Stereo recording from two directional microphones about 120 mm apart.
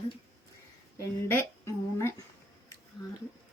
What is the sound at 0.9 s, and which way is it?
Speech, 25° left (ahead or behind).